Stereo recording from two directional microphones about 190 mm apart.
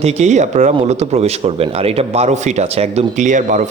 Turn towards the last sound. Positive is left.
turn(degrees=-40)  # may be behind; listen again after turning